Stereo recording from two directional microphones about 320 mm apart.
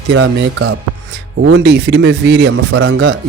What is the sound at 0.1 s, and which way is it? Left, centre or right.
Speech, right.